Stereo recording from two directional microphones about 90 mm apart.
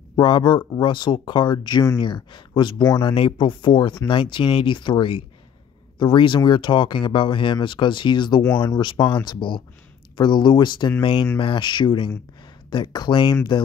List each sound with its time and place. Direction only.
0.1 s speech: 60° left (ahead or behind)
2.8 s speech: 45° left (ahead or behind)
3.2 s speech: 70° left (ahead or behind)
8.6 s speech: 45° left (ahead or behind)